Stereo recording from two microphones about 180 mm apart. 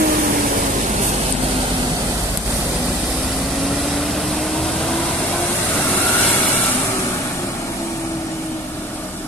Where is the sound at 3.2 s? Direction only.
Centre (ahead or behind).